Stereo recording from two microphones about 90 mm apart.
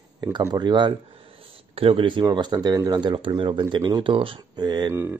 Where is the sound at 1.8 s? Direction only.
85° right; by 3.6 s 65° right (ahead or behind).